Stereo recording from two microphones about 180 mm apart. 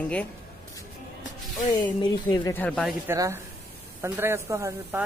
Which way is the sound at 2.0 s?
25° left (ahead or behind).